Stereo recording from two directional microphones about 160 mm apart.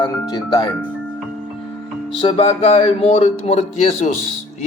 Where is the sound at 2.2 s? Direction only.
35° left (ahead or behind).